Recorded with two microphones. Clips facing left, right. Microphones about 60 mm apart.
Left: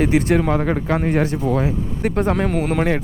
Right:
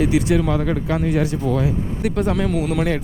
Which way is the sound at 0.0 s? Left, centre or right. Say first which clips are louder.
Left 1 dB; left.